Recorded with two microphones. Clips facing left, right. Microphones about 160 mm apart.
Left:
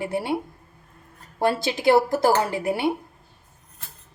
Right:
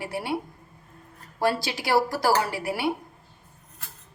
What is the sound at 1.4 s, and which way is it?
Speech, 25° left (ahead or behind).